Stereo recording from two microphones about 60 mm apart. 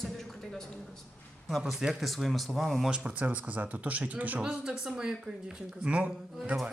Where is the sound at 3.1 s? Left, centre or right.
Right.